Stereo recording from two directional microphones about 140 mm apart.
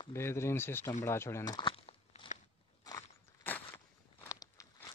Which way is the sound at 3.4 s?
15° left (ahead or behind).